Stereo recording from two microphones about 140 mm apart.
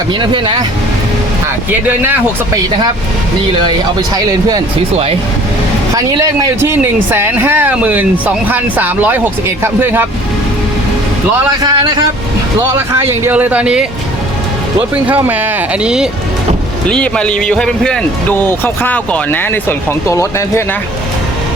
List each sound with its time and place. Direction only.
0.2 s speech: 35° right (ahead or behind)
3.7 s speech: 25° right (ahead or behind)
5.9 s speech: 25° right (ahead or behind)
11.6 s speech: 30° right (ahead or behind)
12.9 s speech: 20° right (ahead or behind)
15.0 s speech: 10° right (ahead or behind)
16.9 s a man's voice: 5° left (ahead or behind)